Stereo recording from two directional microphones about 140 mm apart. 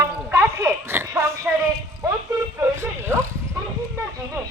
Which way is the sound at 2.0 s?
25° right (ahead or behind).